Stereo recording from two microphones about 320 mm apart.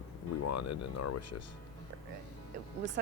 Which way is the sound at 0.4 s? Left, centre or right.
Left.